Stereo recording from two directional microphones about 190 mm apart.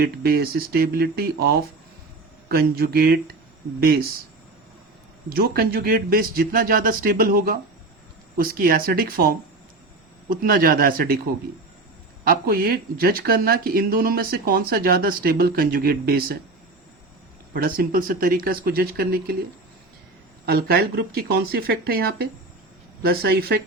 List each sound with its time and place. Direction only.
0.0 s speech: 55° right (ahead or behind)
5.3 s speech: 50° right (ahead or behind)
12.2 s speech: 50° right (ahead or behind)
17.5 s speech: 50° right (ahead or behind)
20.4 s speech: 55° right (ahead or behind)